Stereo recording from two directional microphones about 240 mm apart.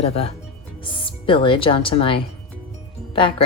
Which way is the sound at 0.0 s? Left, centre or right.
Left.